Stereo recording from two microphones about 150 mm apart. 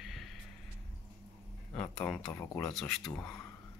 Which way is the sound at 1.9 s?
5° left (ahead or behind).